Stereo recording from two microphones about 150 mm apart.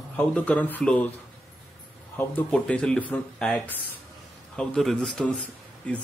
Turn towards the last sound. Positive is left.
turn(degrees=10)  # may be behind; listen again after turning